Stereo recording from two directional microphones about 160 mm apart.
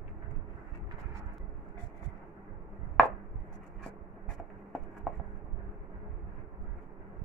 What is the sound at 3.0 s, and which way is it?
Chopping, 5° left (ahead or behind).